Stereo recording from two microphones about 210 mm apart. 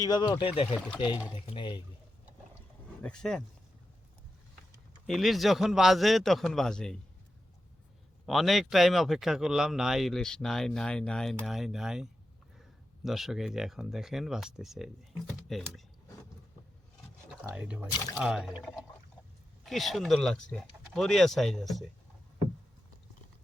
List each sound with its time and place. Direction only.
0.0 s speech: 20° left (ahead or behind)
3.0 s a man's voice: 5° left (ahead or behind)
5.0 s a man's voice: centre (ahead or behind)
8.3 s a man's voice: centre (ahead or behind)
17.4 s a man's voice: 5° right (ahead or behind)